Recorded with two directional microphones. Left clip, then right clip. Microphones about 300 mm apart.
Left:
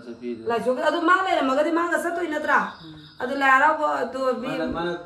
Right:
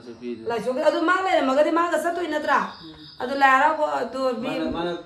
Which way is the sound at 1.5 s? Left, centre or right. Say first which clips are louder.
Right 2 dB; centre.